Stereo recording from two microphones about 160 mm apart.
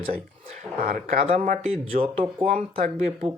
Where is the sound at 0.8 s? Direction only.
65° right (ahead or behind).